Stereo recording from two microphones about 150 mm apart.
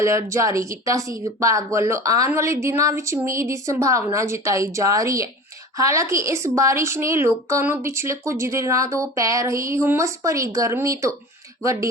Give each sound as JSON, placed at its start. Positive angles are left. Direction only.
{"t": 0.0, "sound": "a woman's voice", "side_deg": -20}